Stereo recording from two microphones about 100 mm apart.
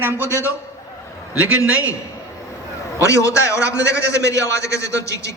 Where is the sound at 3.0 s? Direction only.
30° left (ahead or behind).